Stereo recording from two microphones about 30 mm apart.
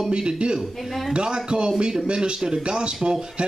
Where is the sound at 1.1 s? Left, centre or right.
Right.